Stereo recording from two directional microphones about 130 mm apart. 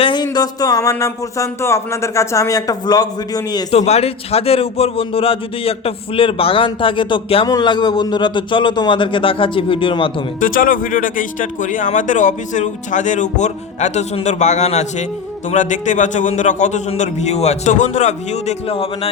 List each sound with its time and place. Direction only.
0.0 s speech: 35° left (ahead or behind)
3.7 s a man's voice: 55° left (ahead or behind)
7.4 s a man's voice: 30° left (ahead or behind)
10.4 s a man's voice: 90° left; by 15.0 s 60° left (ahead or behind)
15.4 s a man's voice: 70° left (ahead or behind); by 19.1 s 50° left (ahead or behind)